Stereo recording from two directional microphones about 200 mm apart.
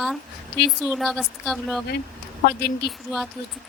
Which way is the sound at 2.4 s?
55° left (ahead or behind).